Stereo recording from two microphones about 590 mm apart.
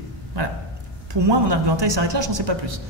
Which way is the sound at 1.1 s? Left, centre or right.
Right.